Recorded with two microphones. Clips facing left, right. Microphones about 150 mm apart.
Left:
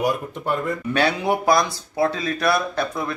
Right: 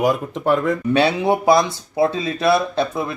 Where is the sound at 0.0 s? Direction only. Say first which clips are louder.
Right 5 dB; 90° right.